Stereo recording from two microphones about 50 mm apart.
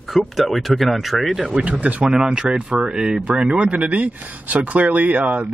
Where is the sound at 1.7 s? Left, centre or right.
Right.